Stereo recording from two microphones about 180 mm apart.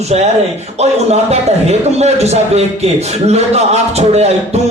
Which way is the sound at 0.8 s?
35° right (ahead or behind).